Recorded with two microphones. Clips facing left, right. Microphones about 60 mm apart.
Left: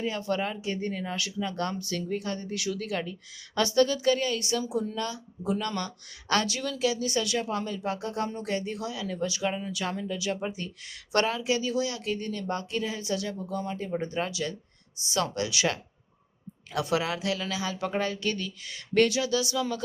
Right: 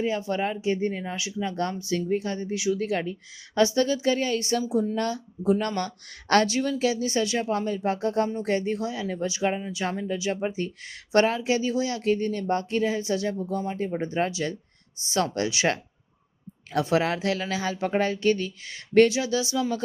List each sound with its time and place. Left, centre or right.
0.0 s speech: right